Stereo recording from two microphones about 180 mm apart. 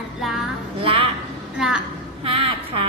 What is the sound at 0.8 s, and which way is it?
Speech, 30° right (ahead or behind).